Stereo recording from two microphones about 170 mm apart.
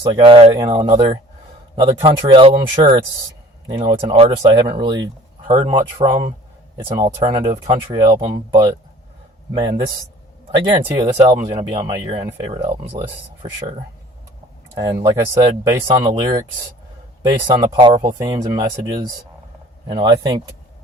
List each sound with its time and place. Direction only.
0.0 s speech: 30° right (ahead or behind)
9.6 s speech: 20° right (ahead or behind)
11.8 s speech: 20° right (ahead or behind)
14.8 s speech: 20° right (ahead or behind)